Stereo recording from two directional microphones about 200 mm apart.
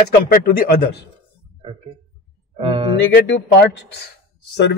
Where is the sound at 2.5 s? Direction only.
25° right (ahead or behind).